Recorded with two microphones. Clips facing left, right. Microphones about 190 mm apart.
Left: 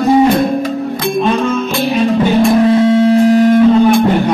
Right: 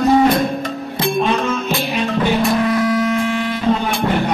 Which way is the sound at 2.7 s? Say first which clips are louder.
Left 8 dB; 25° left (ahead or behind).